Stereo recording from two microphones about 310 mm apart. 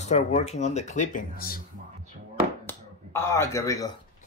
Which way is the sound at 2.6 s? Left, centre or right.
Centre.